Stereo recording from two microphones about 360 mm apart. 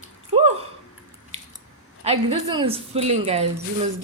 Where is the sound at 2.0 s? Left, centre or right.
Centre.